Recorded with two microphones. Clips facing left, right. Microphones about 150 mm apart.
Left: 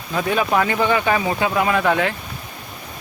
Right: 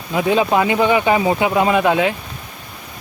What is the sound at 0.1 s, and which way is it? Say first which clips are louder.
Speech: right 4 dB; 15° right (ahead or behind).